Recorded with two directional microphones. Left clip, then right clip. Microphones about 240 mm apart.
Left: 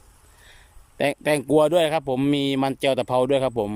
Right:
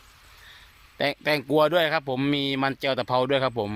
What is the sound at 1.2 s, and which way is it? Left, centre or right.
Speech, centre.